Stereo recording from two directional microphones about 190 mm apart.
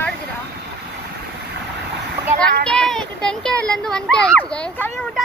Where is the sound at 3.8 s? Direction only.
5° left (ahead or behind).